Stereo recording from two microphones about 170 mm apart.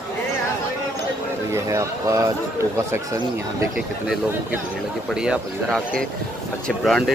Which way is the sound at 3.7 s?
5° right (ahead or behind).